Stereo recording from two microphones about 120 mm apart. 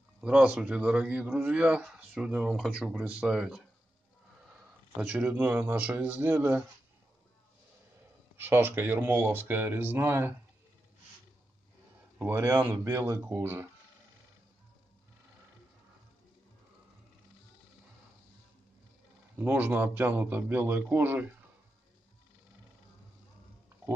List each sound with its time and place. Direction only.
0.2 s a man's voice: 10° right (ahead or behind)
4.9 s a man's voice: 15° right (ahead or behind)
8.4 s speech: 20° right (ahead or behind)
12.2 s speech: 20° right (ahead or behind)
19.3 s a man's voice: 15° right (ahead or behind)